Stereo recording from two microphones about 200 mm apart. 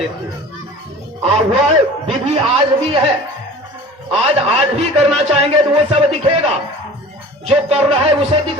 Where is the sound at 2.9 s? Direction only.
30° right (ahead or behind).